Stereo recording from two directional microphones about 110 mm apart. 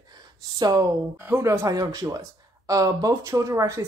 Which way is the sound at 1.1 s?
20° right (ahead or behind).